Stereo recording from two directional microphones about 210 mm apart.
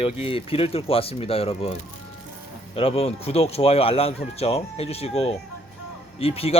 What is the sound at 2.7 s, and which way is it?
Speech, 25° left (ahead or behind).